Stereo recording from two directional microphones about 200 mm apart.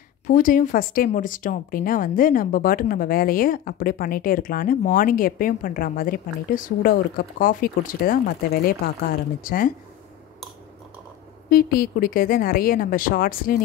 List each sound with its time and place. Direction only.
0.3 s speech: 40° left (ahead or behind)
11.5 s speech: 45° left (ahead or behind)